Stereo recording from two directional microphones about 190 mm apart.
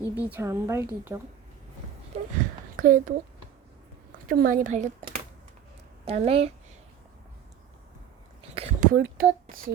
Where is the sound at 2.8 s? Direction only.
45° right (ahead or behind).